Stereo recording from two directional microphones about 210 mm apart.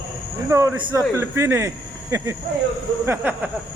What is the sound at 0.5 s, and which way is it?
A man's voice, 15° right (ahead or behind).